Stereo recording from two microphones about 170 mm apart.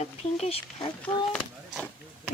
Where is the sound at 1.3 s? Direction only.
5° left (ahead or behind).